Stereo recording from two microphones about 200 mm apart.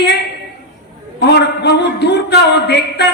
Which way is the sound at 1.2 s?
55° left (ahead or behind).